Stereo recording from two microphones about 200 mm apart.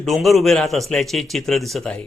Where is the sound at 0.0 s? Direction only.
Centre (ahead or behind).